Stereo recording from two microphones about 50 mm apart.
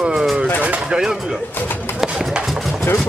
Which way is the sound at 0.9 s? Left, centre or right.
Centre.